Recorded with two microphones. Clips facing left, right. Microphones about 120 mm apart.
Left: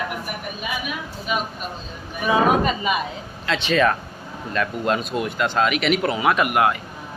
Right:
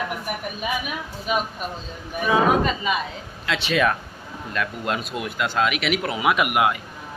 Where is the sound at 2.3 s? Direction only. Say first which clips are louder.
Left 1 dB; 20° left (ahead or behind).